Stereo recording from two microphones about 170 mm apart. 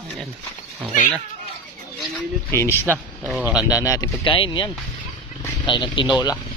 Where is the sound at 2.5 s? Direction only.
15° left (ahead or behind).